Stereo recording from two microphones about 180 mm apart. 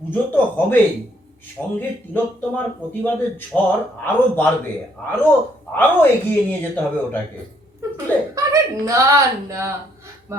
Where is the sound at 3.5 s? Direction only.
Centre (ahead or behind).